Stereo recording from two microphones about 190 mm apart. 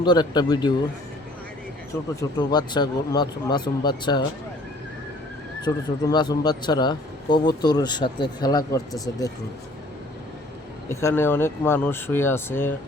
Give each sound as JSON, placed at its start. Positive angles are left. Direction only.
{"t": 0.0, "sound": "speech", "side_deg": 25}
{"t": 2.5, "sound": "speech", "side_deg": 20}
{"t": 5.6, "sound": "speech", "side_deg": 20}
{"t": 10.8, "sound": "speech", "side_deg": 15}